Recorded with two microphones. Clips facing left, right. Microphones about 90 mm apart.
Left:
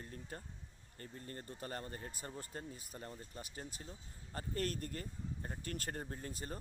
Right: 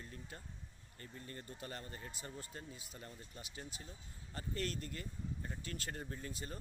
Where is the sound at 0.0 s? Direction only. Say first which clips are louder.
Left 3 dB; 40° left (ahead or behind).